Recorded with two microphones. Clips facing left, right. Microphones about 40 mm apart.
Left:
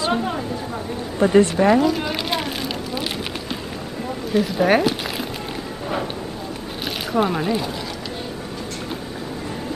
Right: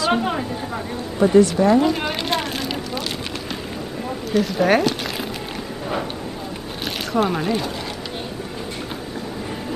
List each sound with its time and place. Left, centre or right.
0.1 s a woman's voice: right
1.3 s a woman's voice: left
1.8 s a woman's voice: centre
2.2 s vehicle: centre
4.3 s speech: centre
6.8 s a sound: centre